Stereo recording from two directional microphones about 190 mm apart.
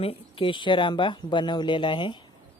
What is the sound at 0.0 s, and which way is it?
Speech, 30° left (ahead or behind).